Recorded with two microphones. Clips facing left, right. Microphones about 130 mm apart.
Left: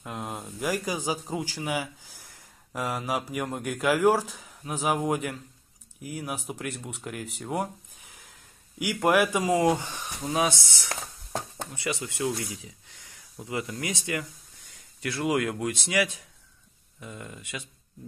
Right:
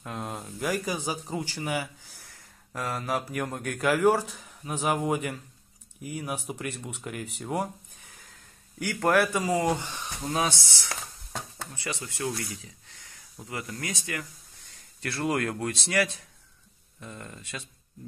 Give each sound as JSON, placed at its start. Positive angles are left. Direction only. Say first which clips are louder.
{"t": 0.0, "sound": "speech", "louder": "even", "side_deg": 5}
{"t": 8.7, "sound": "speech", "louder": "left 1 dB", "side_deg": 15}
{"t": 15.0, "sound": "speech", "louder": "left 2 dB", "side_deg": 10}